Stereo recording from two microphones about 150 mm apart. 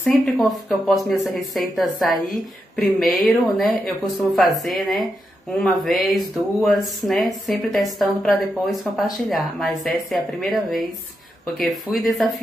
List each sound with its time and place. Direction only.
0.0 s speech: centre (ahead or behind)